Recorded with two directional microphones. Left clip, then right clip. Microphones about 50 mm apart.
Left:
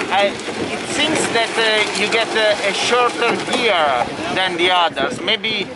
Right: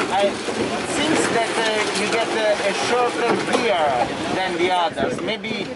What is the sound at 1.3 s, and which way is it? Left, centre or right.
Speech, centre.